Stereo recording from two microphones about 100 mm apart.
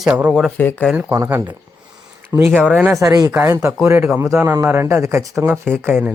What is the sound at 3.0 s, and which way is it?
Speech, 35° right (ahead or behind).